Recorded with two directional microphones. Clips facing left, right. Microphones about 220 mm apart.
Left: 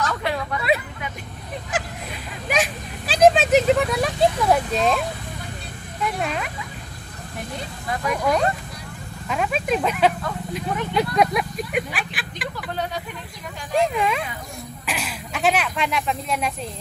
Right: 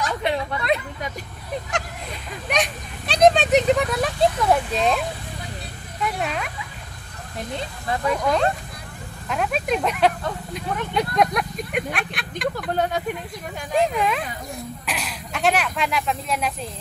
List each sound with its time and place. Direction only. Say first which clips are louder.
0.0 s a sound: right 1 dB; 20° right (ahead or behind)
2.4 s speech: left 1 dB; centre (ahead or behind)
6.0 s speech: even; centre (ahead or behind)
8.1 s speech: even; 5° left (ahead or behind)
12.5 s speech: right 3 dB; 50° right (ahead or behind)
13.7 s speech: even; centre (ahead or behind)